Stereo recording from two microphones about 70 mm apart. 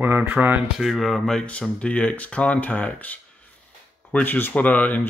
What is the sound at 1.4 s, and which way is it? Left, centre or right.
Speech, centre.